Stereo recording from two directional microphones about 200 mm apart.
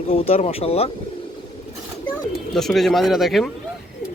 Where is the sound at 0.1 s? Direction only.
30° left (ahead or behind).